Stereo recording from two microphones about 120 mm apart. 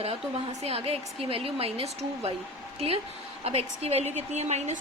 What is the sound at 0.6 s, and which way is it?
A woman's voice, 55° right (ahead or behind).